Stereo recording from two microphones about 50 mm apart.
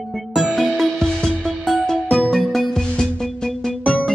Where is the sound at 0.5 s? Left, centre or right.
Centre.